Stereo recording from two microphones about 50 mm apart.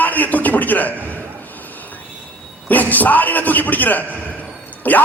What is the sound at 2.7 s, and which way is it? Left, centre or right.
A man's voice, left.